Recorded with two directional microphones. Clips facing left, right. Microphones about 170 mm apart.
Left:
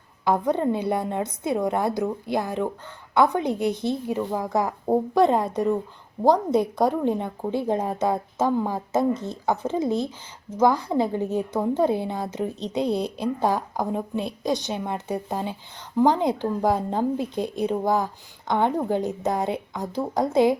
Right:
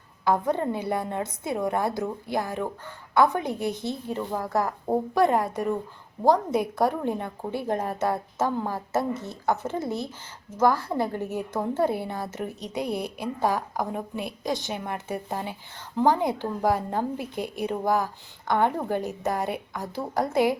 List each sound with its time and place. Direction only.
0.3 s a woman's voice: 20° left (ahead or behind)